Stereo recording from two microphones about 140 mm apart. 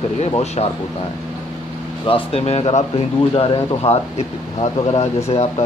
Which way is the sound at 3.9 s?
45° left (ahead or behind).